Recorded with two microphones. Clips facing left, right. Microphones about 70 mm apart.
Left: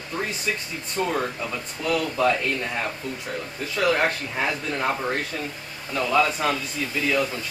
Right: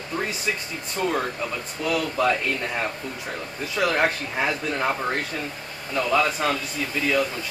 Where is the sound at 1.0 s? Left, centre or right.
Centre.